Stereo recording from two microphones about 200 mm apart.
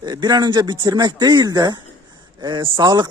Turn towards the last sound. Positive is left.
turn(degrees=-20)  # may be behind; listen again after turning